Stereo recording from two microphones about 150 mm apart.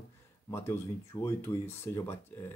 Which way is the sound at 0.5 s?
15° left (ahead or behind).